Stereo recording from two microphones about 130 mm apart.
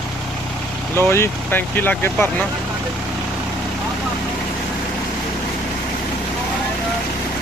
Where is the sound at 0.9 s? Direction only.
20° left (ahead or behind).